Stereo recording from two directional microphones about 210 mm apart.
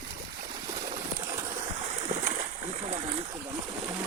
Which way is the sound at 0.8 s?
15° right (ahead or behind).